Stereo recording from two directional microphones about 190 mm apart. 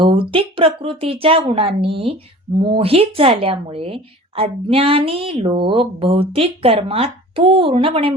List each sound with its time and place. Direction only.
0.0 s speech: 25° right (ahead or behind)